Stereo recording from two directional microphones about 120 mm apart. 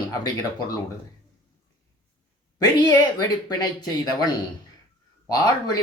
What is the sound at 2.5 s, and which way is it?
A woman's voice, 35° left (ahead or behind).